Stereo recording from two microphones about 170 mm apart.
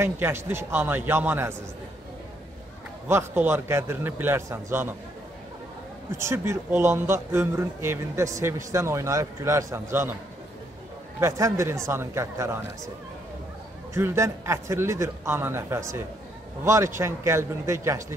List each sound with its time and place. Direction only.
0.0 s speech: 15° right (ahead or behind)
3.1 s speech: 15° right (ahead or behind)
6.1 s speech: 15° right (ahead or behind)
11.1 s speech: 15° right (ahead or behind)
13.9 s speech: 15° right (ahead or behind)